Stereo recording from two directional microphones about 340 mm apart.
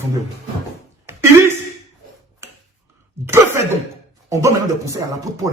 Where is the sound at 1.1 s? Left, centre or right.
Centre.